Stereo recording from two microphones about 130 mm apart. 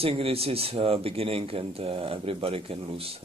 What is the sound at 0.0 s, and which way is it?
Speech, 45° right (ahead or behind).